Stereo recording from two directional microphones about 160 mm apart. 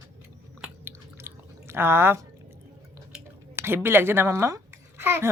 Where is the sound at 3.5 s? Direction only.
15° right (ahead or behind).